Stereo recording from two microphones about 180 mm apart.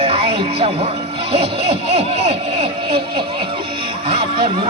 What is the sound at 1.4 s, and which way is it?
Speech, 65° right (ahead or behind).